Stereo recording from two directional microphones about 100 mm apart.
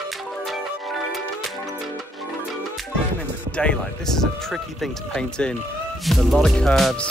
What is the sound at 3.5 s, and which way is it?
Speech, 10° left (ahead or behind).